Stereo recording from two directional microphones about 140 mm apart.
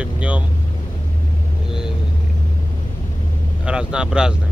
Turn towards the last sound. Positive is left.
turn(degrees=-5)  # may be behind; listen again after turning